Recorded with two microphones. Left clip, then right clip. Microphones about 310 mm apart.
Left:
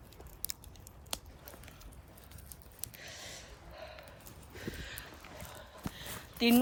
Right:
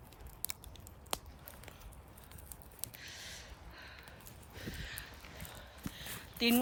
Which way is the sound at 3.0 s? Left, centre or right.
Centre.